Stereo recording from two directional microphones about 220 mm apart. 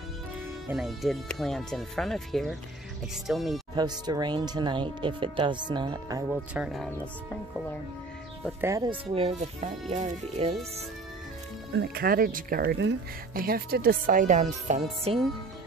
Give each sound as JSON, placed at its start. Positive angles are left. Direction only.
{"t": 0.7, "sound": "speech", "side_deg": 0}
{"t": 3.7, "sound": "speech", "side_deg": -20}
{"t": 6.5, "sound": "speech", "side_deg": 0}
{"t": 8.4, "sound": "speech", "side_deg": 0}
{"t": 8.6, "sound": "speech", "side_deg": -15}
{"t": 9.1, "sound": "speech", "side_deg": -30}
{"t": 11.7, "sound": "speech", "side_deg": -45}